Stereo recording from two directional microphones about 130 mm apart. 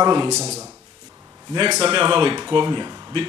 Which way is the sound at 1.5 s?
35° right (ahead or behind).